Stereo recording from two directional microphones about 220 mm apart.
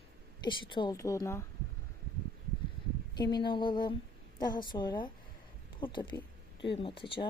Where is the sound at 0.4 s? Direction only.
20° left (ahead or behind).